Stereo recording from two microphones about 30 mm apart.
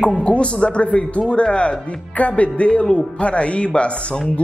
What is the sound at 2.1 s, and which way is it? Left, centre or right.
Speech, left.